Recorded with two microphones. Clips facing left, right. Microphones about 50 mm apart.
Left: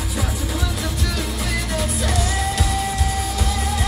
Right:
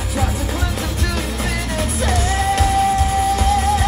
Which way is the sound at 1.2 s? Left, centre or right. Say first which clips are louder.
Right 2 dB; right.